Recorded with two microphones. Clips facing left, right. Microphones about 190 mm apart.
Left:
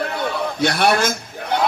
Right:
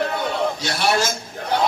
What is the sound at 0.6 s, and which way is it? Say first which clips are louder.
Speech: left 4 dB; 55° left (ahead or behind).